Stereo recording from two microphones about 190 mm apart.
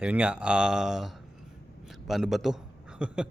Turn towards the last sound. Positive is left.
turn(degrees=-5)  # may be behind; listen again after turning